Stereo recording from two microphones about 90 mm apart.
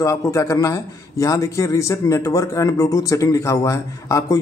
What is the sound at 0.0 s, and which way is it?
A man's voice, 35° left (ahead or behind).